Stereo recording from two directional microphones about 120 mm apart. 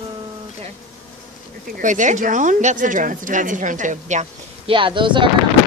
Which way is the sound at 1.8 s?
90° right.